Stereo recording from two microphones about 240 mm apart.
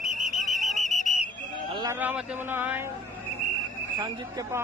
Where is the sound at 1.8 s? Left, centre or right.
Centre.